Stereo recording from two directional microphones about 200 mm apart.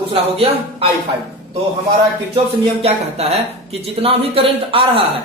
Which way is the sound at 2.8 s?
30° right (ahead or behind).